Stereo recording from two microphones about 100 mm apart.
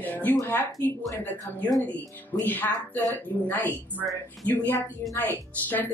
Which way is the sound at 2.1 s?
15° left (ahead or behind).